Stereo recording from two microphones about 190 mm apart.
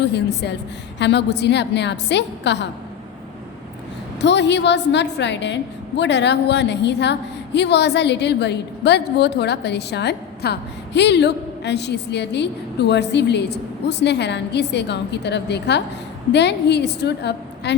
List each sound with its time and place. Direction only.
0.0 s a woman's voice: 65° left (ahead or behind)
4.2 s a woman's voice: 65° left (ahead or behind)